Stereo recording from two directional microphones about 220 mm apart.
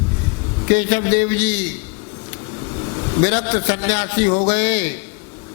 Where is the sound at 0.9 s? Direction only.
15° left (ahead or behind).